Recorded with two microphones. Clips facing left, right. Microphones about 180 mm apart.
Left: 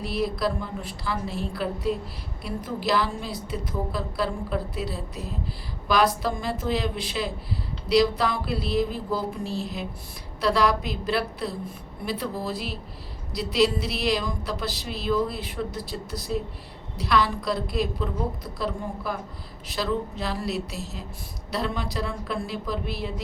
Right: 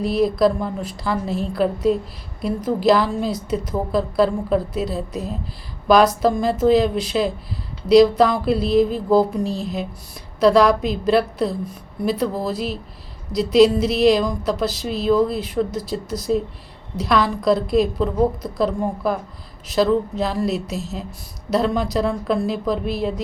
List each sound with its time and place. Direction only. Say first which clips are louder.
0.0 s a woman's voice: right 9 dB; 45° right (ahead or behind)